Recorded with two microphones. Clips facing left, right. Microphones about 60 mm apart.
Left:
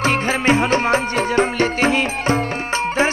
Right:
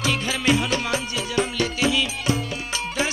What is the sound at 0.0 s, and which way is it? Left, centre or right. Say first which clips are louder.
Music: left 6 dB; left.